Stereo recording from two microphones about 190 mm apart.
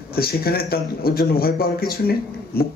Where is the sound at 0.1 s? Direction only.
50° left (ahead or behind).